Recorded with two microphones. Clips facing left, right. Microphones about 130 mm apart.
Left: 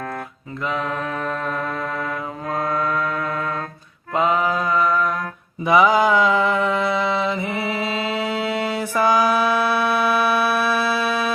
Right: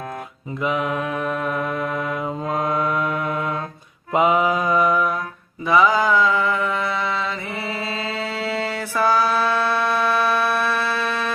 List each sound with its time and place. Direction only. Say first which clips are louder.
0.6 s mantra: right 2 dB; 15° right (ahead or behind)
5.6 s mantra: left 2 dB; 15° left (ahead or behind)